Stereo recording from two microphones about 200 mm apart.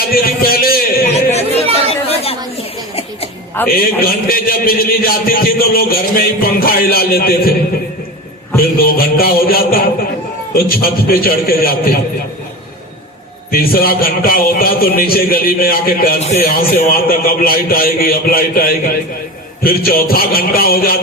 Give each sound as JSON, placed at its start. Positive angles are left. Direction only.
{"t": 0.1, "sound": "a sound", "side_deg": 50}
{"t": 1.7, "sound": "chatter", "side_deg": 30}
{"t": 3.7, "sound": "a man's voice", "side_deg": 45}
{"t": 8.8, "sound": "a man's voice", "side_deg": 45}
{"t": 13.5, "sound": "a man's voice", "side_deg": 45}